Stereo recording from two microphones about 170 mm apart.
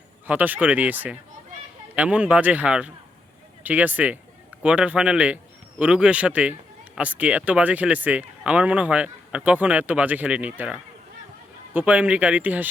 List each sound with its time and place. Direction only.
0.3 s a man's voice: 10° right (ahead or behind)